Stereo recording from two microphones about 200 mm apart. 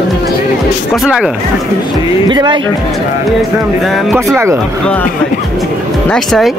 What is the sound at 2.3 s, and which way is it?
Speech, 25° right (ahead or behind).